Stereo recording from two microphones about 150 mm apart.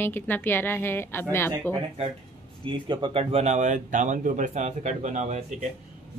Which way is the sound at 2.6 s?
30° right (ahead or behind).